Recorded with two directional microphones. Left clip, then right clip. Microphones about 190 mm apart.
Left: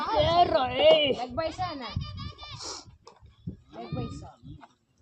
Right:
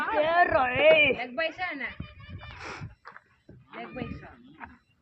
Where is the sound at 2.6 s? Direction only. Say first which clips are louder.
Right 1 dB; 5° right (ahead or behind).